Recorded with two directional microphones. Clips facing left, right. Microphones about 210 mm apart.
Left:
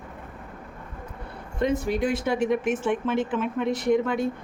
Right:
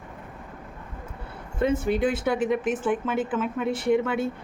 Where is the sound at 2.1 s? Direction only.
5° right (ahead or behind).